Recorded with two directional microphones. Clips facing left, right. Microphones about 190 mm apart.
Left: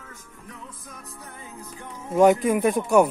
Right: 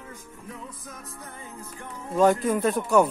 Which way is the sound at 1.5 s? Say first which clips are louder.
Left 1 dB; 15° left (ahead or behind).